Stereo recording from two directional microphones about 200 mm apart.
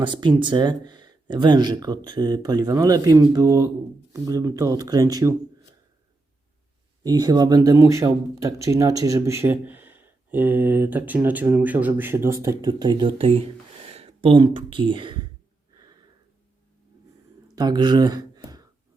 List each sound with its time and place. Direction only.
0.0 s speech: 25° right (ahead or behind)
7.0 s speech: 20° right (ahead or behind)
17.5 s a sound: 20° right (ahead or behind)